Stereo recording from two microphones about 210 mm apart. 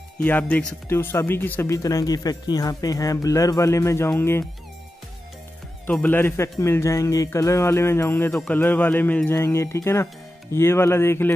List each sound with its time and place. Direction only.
0.2 s speech: 10° left (ahead or behind)
5.9 s speech: 10° left (ahead or behind)